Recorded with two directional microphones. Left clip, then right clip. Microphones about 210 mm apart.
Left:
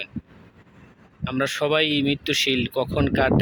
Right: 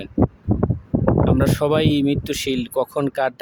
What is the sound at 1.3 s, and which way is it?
Speech, 25° right (ahead or behind).